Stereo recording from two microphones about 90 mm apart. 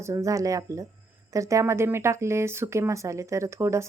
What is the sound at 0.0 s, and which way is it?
Speech, 35° right (ahead or behind).